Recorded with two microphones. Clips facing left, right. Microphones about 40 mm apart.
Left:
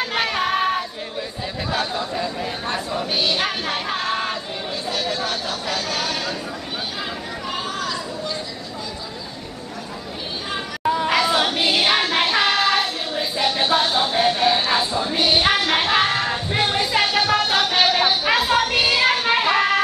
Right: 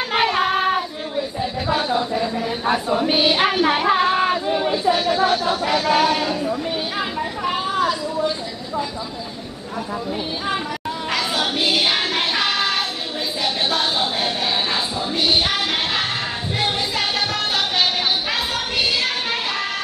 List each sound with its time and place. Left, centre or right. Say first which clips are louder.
0.1 s child singing: right 6 dB; centre
1.4 s chatter: right 2 dB; centre
2.9 s speech: right 4 dB; centre
3.6 s a sound: right 7 dB; centre
7.4 s chatter: right 6 dB; centre
11.3 s music: left 1 dB; centre
12.3 s child singing: left 2 dB; centre
13.4 s music: left 3 dB; centre
13.9 s a sound: left 3 dB; centre
15.1 s music: left 1 dB; left
17.3 s music: left 3 dB; left
17.9 s a sound: left 3 dB; left
18.6 s music: left 3 dB; left